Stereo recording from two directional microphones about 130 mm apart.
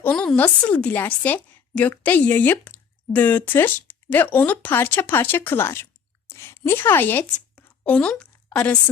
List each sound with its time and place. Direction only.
0.0 s a woman's voice: 5° left (ahead or behind)